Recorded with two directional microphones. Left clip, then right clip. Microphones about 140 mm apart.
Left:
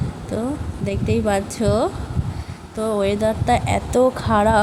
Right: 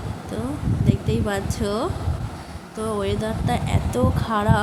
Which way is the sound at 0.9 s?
30° left (ahead or behind).